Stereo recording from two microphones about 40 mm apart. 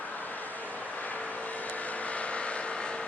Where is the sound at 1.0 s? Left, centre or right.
Left.